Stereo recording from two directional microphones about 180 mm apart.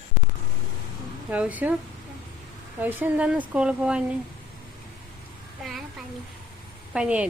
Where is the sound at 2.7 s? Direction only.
10° right (ahead or behind).